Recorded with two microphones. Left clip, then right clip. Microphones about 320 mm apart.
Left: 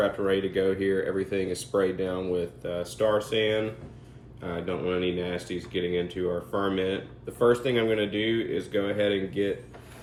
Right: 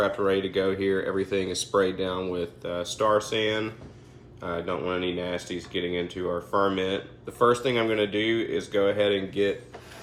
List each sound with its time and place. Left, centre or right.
0.0 s speech: centre